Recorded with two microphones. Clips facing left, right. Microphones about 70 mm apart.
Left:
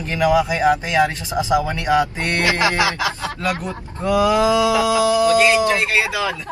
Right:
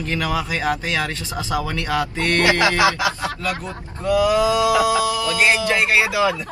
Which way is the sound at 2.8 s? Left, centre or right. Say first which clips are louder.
Right 2 dB; right.